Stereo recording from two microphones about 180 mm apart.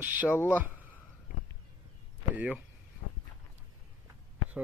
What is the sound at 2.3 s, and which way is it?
Speech, 10° right (ahead or behind).